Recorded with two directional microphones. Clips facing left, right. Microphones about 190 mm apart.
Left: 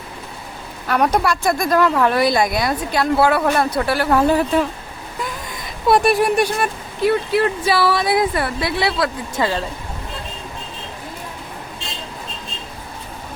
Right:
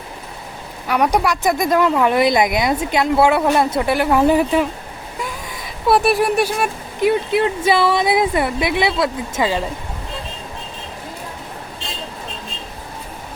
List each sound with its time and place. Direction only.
1.1 s speech: 15° right (ahead or behind)
5.2 s a sound: 5° right (ahead or behind)
7.0 s speech: 20° right (ahead or behind)